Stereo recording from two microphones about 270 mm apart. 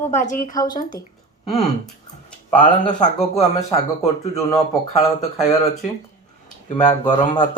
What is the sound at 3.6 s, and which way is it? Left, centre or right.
Speech, centre.